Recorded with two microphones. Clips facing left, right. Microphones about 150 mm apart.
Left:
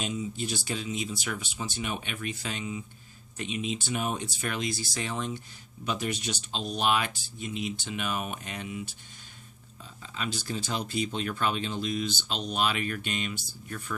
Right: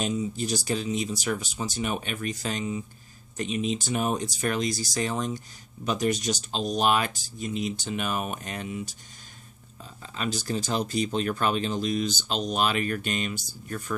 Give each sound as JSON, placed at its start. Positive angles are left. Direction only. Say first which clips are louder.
{"t": 0.0, "sound": "speech", "louder": "right 4 dB", "side_deg": -40}
{"t": 10.0, "sound": "speech", "louder": "right 4 dB", "side_deg": -45}